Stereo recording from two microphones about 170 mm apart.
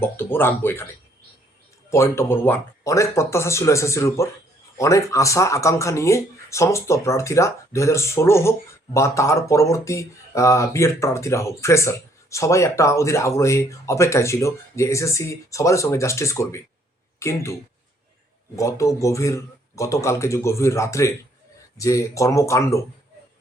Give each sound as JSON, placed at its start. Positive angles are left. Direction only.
{"t": 0.0, "sound": "speech", "side_deg": 10}
{"t": 1.9, "sound": "speech", "side_deg": 15}